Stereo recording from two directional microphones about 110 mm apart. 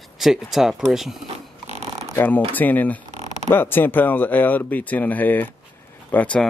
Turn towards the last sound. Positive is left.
turn(degrees=10)  # may be behind; listen again after turning